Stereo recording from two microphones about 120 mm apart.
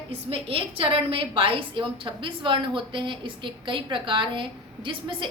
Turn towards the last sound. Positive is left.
turn(degrees=-45)  # may be behind; listen again after turning